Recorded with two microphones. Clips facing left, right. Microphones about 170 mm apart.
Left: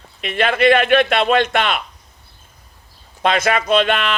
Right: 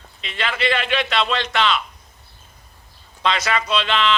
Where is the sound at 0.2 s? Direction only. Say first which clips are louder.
Left 8 dB; 55° left (ahead or behind).